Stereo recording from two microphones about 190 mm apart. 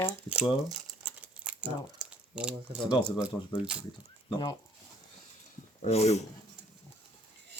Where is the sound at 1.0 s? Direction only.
10° right (ahead or behind).